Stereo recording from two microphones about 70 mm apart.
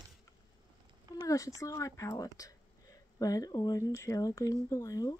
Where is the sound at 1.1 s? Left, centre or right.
Left.